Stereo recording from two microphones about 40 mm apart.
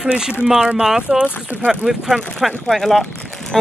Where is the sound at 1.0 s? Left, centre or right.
Right.